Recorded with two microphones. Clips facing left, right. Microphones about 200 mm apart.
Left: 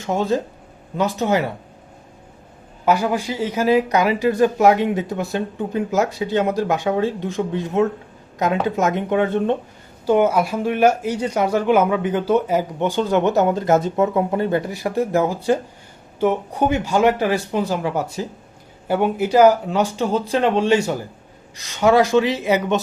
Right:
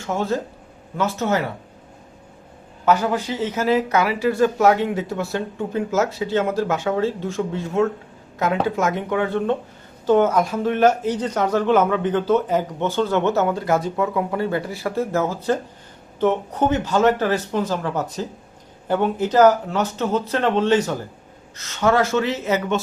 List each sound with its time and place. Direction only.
0.1 s speech: 15° left (ahead or behind)
2.8 s a woman's voice: 10° left (ahead or behind)
10.1 s speech: 10° left (ahead or behind)